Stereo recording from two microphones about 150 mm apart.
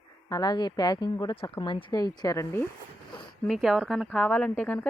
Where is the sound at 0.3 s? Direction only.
25° left (ahead or behind).